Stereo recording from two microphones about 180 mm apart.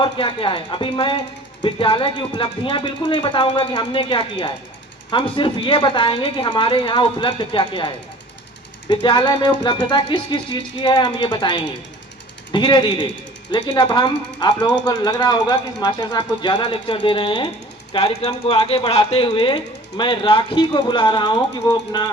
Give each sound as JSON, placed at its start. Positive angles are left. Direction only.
{"t": 0.0, "sound": "speech", "side_deg": 30}